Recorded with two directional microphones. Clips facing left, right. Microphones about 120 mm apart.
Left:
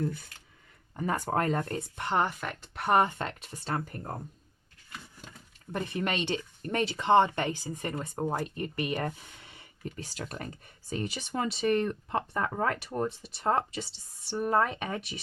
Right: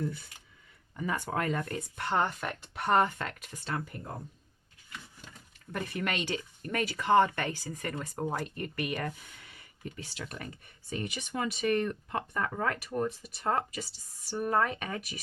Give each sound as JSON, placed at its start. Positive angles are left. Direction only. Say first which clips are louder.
{"t": 0.9, "sound": "speech", "louder": "left 3 dB", "side_deg": 40}
{"t": 2.0, "sound": "speech", "louder": "left 1 dB", "side_deg": 15}
{"t": 2.2, "sound": "speech", "louder": "even", "side_deg": 0}
{"t": 2.9, "sound": "speech", "louder": "left 1 dB", "side_deg": 20}
{"t": 3.7, "sound": "speech", "louder": "left 3 dB", "side_deg": 45}
{"t": 5.7, "sound": "speech", "louder": "left 2 dB", "side_deg": 25}